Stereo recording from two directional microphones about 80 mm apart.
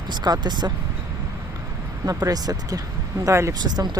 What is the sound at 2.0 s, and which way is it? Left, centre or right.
Speech, right.